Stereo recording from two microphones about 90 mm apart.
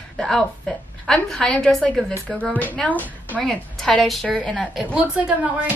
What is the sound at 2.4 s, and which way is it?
A woman's voice, 20° left (ahead or behind).